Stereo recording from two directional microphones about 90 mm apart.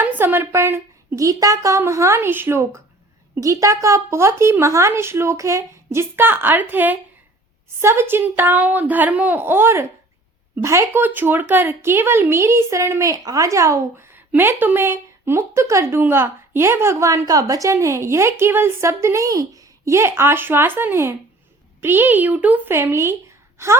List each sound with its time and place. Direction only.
0.0 s a woman's voice: 20° right (ahead or behind)
1.2 s speech: 40° right (ahead or behind)
3.4 s speech: 35° right (ahead or behind)